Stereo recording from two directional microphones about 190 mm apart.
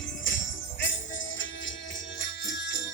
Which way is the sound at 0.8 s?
80° left.